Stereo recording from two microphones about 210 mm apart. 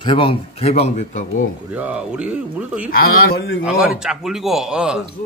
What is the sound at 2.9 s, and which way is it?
Speech, 45° left (ahead or behind).